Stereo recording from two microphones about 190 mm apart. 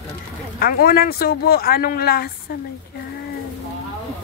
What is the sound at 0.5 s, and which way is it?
Speech, 50° left (ahead or behind).